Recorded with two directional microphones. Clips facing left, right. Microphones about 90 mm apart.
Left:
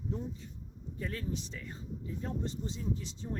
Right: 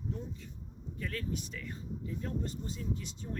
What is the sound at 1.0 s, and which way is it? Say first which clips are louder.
Speech: even; 25° left (ahead or behind).